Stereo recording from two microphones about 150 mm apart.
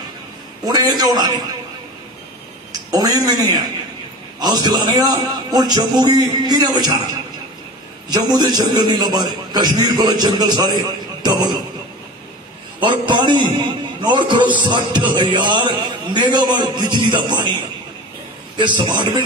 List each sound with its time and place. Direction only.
0.7 s a man's voice: 25° right (ahead or behind)
2.9 s a man's voice: 25° right (ahead or behind)
8.1 s a man's voice: 25° right (ahead or behind)
12.8 s a man's voice: 30° right (ahead or behind)
18.6 s a man's voice: 30° right (ahead or behind)